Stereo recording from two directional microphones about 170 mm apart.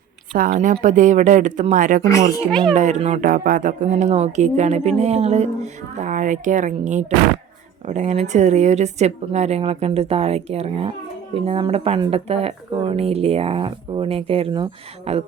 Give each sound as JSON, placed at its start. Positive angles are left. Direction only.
{"t": 0.3, "sound": "speech", "side_deg": -50}
{"t": 2.0, "sound": "a child's voice", "side_deg": 20}
{"t": 2.5, "sound": "a child's voice", "side_deg": 5}
{"t": 2.7, "sound": "speech", "side_deg": -45}